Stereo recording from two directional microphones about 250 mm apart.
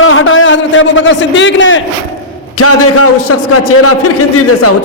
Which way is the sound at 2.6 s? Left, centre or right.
Left.